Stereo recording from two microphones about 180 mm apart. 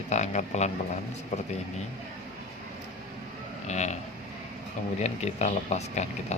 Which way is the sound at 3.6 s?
40° left (ahead or behind).